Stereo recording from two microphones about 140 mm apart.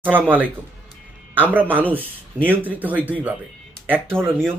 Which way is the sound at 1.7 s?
15° right (ahead or behind).